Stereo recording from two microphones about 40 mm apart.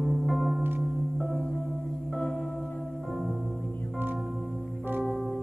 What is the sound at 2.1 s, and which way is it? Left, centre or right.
Singing bowl, centre.